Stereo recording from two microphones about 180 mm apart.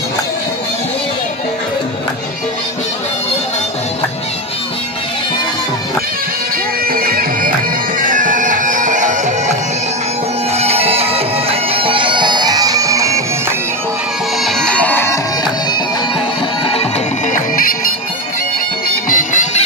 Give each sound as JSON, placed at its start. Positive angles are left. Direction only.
{"t": 6.9, "sound": "bagpipes", "side_deg": -55}
{"t": 14.4, "sound": "music", "side_deg": 5}
{"t": 17.3, "sound": "music", "side_deg": 50}
{"t": 19.0, "sound": "music", "side_deg": 45}